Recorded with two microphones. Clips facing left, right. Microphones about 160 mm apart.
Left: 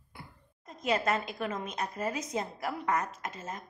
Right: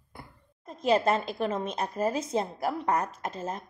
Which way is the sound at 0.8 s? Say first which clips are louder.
Right 5 dB; 30° right (ahead or behind).